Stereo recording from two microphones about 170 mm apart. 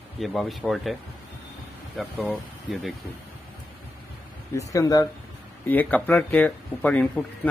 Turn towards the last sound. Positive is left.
turn(degrees=5)  # may be behind; listen again after turning